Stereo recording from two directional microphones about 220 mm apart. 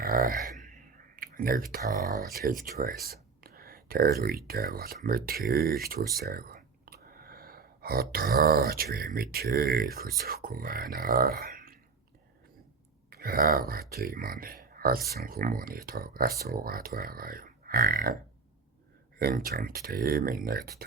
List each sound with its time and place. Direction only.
0.0 s a sound: 40° right (ahead or behind)
1.1 s speech: 40° right (ahead or behind)
6.1 s a sound: 45° right (ahead or behind)
9.3 s speech: 45° right (ahead or behind)
13.1 s speech: 40° right (ahead or behind)
19.2 s speech: 40° right (ahead or behind)